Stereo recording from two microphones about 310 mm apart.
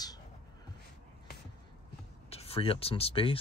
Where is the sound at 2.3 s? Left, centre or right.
Centre.